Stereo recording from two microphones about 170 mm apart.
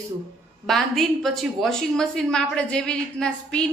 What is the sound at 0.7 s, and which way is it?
A woman's voice, centre (ahead or behind).